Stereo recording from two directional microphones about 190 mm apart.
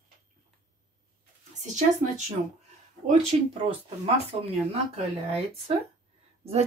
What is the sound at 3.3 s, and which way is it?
Speech, 35° right (ahead or behind).